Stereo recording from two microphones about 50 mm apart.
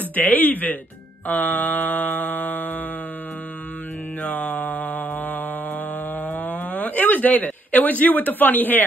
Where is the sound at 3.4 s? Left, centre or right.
Left.